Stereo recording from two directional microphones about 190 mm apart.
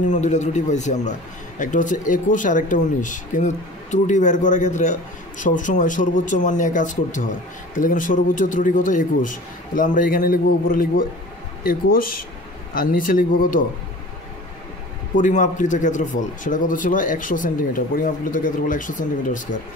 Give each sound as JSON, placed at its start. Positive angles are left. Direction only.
{"t": 0.0, "sound": "a man's voice", "side_deg": 40}
{"t": 15.1, "sound": "a man's voice", "side_deg": 40}